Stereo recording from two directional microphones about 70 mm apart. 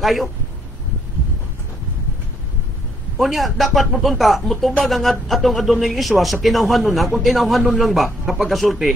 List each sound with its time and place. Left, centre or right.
0.0 s a man's voice: centre
3.2 s a man's voice: centre